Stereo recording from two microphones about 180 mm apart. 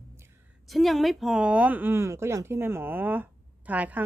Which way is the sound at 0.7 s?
Centre (ahead or behind).